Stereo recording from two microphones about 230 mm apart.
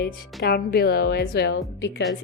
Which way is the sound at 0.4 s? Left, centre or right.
Left.